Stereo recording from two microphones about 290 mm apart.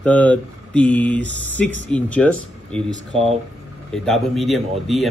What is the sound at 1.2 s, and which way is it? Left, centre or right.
Speech, right.